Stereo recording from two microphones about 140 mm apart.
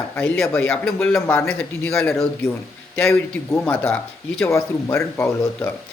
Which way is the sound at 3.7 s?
15° left (ahead or behind).